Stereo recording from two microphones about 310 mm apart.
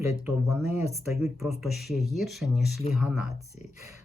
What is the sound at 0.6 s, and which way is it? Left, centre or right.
Speech, left.